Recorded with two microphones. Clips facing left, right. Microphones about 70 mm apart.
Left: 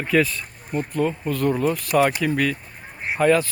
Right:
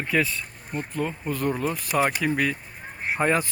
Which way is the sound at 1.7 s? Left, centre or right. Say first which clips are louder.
Left 4 dB; centre.